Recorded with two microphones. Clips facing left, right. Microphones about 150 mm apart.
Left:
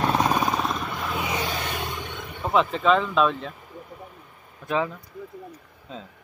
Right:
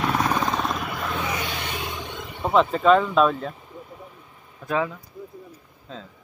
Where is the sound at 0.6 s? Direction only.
5° right (ahead or behind).